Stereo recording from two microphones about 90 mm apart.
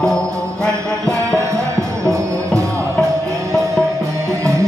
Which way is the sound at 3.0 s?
35° right (ahead or behind).